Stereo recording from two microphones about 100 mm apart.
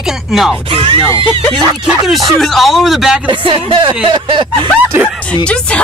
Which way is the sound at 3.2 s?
55° right (ahead or behind).